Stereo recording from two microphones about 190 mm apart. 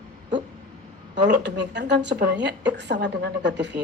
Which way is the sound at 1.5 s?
65° right (ahead or behind).